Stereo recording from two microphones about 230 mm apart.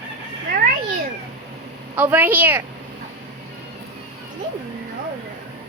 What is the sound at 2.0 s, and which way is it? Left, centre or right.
Speech, centre.